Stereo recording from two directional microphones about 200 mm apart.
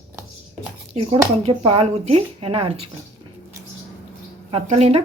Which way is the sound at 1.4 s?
30° right (ahead or behind).